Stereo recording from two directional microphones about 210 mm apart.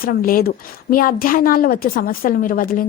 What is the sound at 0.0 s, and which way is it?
A woman's voice, 45° left (ahead or behind).